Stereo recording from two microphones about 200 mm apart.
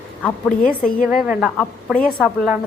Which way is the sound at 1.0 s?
5° right (ahead or behind).